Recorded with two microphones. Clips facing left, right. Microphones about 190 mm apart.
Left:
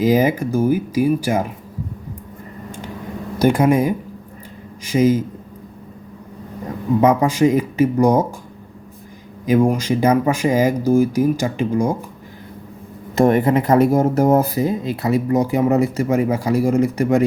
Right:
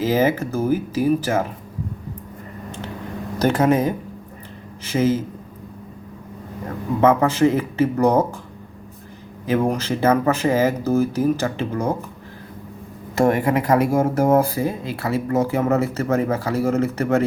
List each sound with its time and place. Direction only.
0.0 s speech: 15° left (ahead or behind)
3.3 s speech: 10° left (ahead or behind)
7.0 s speech: 15° left (ahead or behind)
9.5 s speech: 10° left (ahead or behind)
13.1 s speech: 20° left (ahead or behind)